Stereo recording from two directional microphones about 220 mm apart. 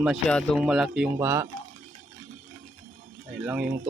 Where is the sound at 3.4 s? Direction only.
10° right (ahead or behind).